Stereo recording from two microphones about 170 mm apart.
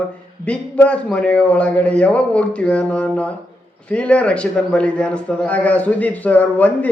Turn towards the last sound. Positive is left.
turn(degrees=10)  # may be behind; listen again after turning